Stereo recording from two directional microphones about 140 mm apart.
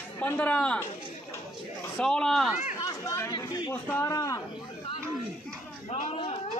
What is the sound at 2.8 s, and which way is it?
Chatter, 25° left (ahead or behind).